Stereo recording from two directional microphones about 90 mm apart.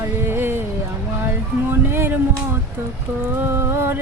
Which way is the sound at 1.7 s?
25° right (ahead or behind).